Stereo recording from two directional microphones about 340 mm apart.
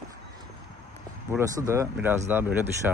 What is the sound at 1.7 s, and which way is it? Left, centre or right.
Speech, centre.